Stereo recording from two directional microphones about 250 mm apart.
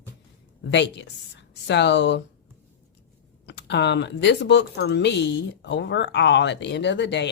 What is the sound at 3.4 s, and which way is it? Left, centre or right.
Speech, left.